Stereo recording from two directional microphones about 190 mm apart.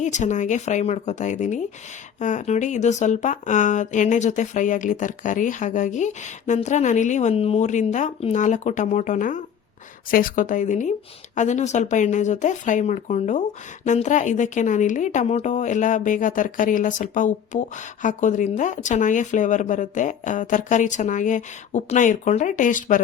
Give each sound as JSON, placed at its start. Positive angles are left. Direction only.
{"t": 0.0, "sound": "a woman's voice", "side_deg": 40}